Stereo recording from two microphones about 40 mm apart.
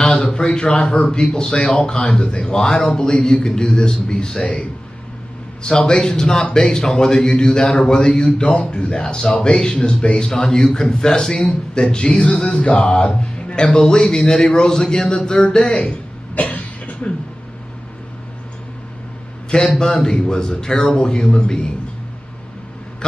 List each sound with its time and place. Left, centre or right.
0.6 s a man's voice: left
4.4 s a man's voice: left
5.6 s a man's voice: centre
11.3 s a man's voice: left
13.0 s music: left
13.6 s a man's voice: centre
16.3 s cough: left
19.8 s a man's voice: centre